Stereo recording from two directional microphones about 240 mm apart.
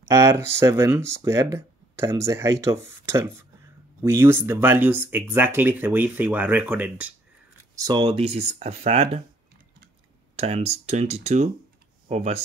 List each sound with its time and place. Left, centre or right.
0.1 s speech: centre
10.3 s speech: right